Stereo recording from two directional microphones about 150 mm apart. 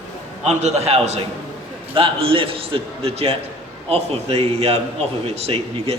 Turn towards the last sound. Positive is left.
turn(degrees=-40)  # may be behind; listen again after turning